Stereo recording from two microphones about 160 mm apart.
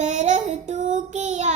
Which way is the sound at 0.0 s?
50° right (ahead or behind).